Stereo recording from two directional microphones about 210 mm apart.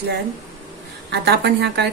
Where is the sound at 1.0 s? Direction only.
50° right (ahead or behind).